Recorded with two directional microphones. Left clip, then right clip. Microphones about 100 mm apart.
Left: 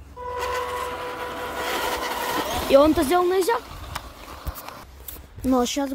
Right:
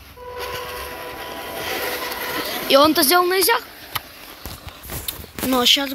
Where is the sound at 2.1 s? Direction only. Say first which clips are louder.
Even; 20° left (ahead or behind).